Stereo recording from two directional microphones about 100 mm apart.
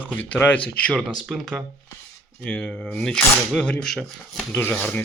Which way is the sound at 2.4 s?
15° left (ahead or behind).